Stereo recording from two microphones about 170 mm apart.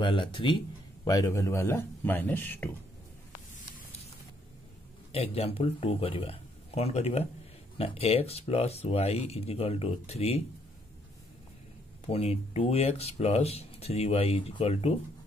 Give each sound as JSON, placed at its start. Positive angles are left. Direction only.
{"t": 0.0, "sound": "speech", "side_deg": 30}
{"t": 5.1, "sound": "speech", "side_deg": 35}
{"t": 12.1, "sound": "speech", "side_deg": 35}